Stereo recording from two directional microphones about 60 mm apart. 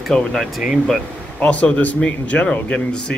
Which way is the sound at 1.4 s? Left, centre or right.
Left.